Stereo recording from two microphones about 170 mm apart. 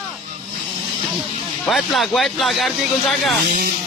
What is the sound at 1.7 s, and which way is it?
Speech, centre (ahead or behind).